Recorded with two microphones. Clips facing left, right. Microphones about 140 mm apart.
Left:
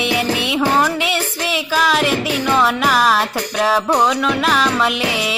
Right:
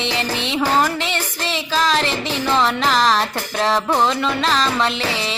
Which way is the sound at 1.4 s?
10° left (ahead or behind).